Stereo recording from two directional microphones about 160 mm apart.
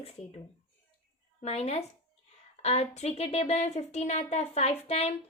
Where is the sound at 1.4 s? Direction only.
40° left (ahead or behind).